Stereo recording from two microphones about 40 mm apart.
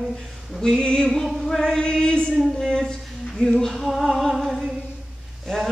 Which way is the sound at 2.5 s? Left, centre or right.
Centre.